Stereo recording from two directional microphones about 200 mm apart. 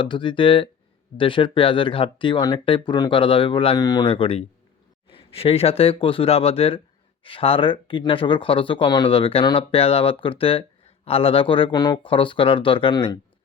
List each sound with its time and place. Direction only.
0.0 s speech: 25° left (ahead or behind)